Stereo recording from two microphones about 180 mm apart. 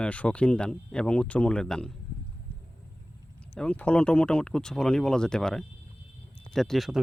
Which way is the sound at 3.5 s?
5° left (ahead or behind).